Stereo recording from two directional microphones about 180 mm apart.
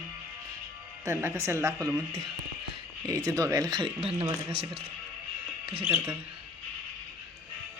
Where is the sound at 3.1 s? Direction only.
20° right (ahead or behind).